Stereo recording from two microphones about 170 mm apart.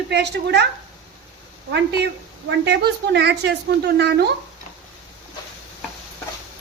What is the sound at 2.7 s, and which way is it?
A woman's voice, 80° right.